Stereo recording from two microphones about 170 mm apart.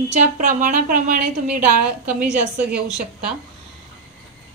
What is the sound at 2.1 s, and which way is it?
A woman's voice, 5° right (ahead or behind).